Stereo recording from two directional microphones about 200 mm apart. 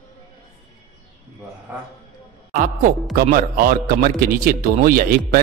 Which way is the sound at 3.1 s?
45° right (ahead or behind).